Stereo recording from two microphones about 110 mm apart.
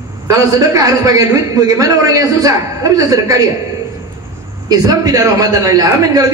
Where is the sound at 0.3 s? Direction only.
30° right (ahead or behind).